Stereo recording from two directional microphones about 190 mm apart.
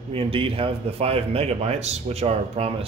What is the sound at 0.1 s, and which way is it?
A man's voice, 30° right (ahead or behind).